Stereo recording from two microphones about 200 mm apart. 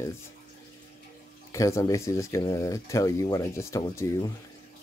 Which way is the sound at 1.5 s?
15° left (ahead or behind).